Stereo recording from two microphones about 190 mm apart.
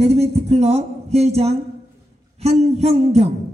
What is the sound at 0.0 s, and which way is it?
Speech, 35° right (ahead or behind).